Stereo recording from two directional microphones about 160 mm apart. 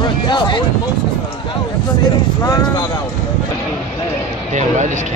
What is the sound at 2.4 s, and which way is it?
Speech, 25° left (ahead or behind).